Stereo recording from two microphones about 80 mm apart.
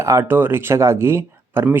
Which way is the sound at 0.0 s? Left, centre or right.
Right.